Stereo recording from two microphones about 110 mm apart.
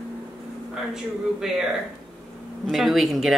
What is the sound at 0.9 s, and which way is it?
Speech, 5° right (ahead or behind).